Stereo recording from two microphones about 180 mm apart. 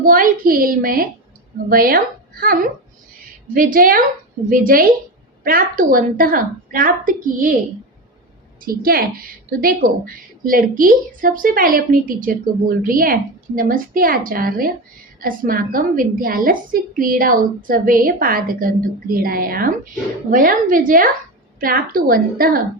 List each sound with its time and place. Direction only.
0.0 s a woman's voice: 50° right (ahead or behind)
8.6 s a woman's voice: 55° right (ahead or behind)